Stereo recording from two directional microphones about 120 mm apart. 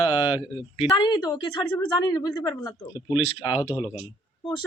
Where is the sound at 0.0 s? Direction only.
45° left (ahead or behind).